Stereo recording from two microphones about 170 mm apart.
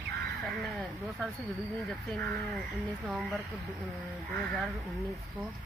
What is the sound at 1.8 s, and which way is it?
Speech, 5° left (ahead or behind).